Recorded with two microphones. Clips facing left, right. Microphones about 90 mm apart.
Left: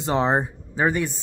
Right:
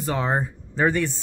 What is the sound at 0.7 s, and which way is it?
Speech, 10° left (ahead or behind).